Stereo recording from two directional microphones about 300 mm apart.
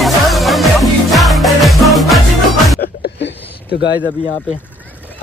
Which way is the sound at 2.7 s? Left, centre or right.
Left.